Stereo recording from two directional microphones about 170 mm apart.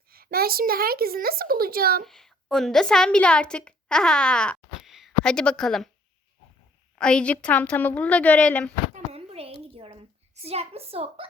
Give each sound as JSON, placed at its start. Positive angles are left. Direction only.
{"t": 0.1, "sound": "a woman's voice", "side_deg": -60}
{"t": 2.0, "sound": "a woman's voice", "side_deg": 0}
{"t": 7.0, "sound": "speech", "side_deg": 5}
{"t": 9.1, "sound": "a sound", "side_deg": -35}
{"t": 10.4, "sound": "a woman's voice", "side_deg": -35}